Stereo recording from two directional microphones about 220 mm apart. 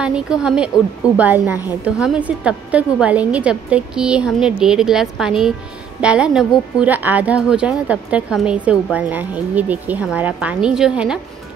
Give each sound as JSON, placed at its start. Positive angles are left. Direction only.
{"t": 0.0, "sound": "a woman's voice", "side_deg": -5}